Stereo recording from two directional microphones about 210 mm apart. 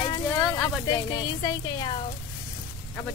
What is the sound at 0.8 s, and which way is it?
Speech, 20° left (ahead or behind).